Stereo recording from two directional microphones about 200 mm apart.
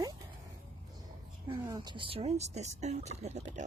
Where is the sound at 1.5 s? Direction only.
20° right (ahead or behind).